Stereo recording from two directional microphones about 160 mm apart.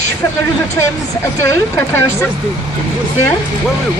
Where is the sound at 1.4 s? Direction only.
15° left (ahead or behind).